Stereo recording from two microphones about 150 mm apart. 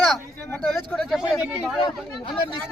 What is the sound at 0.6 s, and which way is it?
Speech, centre (ahead or behind).